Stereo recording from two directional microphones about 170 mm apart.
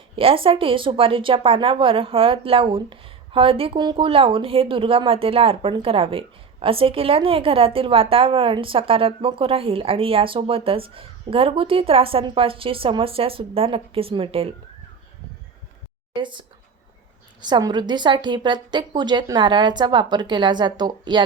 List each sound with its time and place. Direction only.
0.2 s a woman's voice: 30° right (ahead or behind)
16.1 s a woman's voice: 30° right (ahead or behind)
17.4 s a woman's voice: 25° right (ahead or behind)